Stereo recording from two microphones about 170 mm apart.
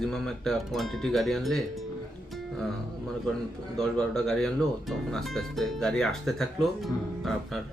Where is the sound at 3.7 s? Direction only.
5° left (ahead or behind).